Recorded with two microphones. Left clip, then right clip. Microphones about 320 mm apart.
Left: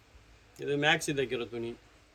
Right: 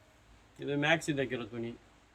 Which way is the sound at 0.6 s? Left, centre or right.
Centre.